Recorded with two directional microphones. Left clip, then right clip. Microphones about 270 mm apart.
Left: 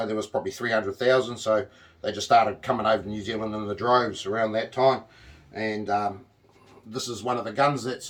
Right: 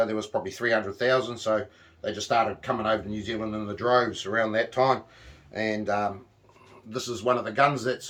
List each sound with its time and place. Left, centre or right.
0.0 s speech: centre